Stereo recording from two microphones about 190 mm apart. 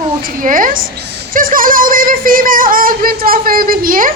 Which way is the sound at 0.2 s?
50° right (ahead or behind).